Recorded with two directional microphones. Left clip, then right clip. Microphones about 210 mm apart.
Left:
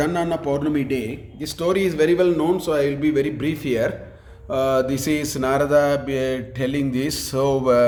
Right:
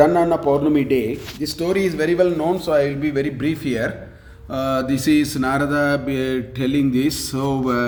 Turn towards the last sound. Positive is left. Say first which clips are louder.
# left 4 dB
turn(degrees=25)  # may be behind; listen again after turning